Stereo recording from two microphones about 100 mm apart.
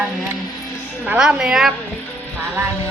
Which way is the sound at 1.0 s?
10° right (ahead or behind).